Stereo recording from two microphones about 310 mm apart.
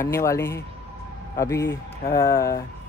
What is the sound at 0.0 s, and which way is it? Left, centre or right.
Speech, centre.